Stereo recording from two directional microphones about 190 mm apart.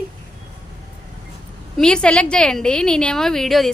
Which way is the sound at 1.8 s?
5° left (ahead or behind).